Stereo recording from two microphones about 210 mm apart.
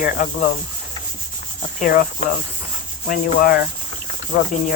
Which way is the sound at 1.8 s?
45° left (ahead or behind).